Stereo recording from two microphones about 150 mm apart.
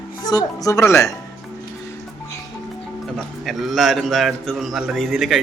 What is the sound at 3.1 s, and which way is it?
A man's voice, centre (ahead or behind).